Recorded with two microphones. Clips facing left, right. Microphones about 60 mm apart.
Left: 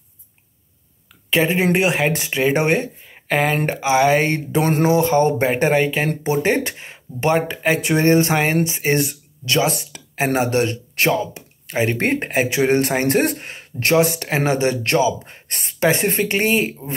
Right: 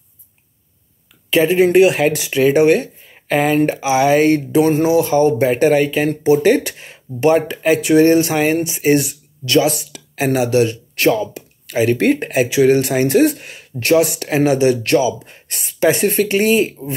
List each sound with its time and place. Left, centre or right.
1.3 s speech: left
11.0 s speech: left